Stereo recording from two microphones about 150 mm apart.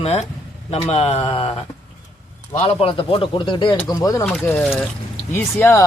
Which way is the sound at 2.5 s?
40° left (ahead or behind).